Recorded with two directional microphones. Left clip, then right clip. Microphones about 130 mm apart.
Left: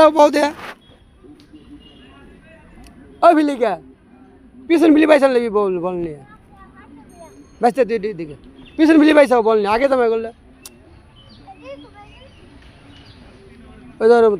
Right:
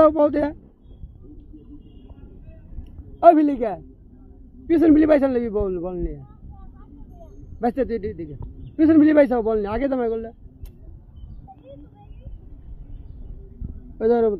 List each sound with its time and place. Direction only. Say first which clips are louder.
0.1 s speech: left 7 dB; 25° right (ahead or behind)
3.2 s a man's voice: left 2 dB; 40° right (ahead or behind)
7.6 s a man's voice: left 7 dB; 35° right (ahead or behind)
13.9 s speech: left 7 dB; 40° right (ahead or behind)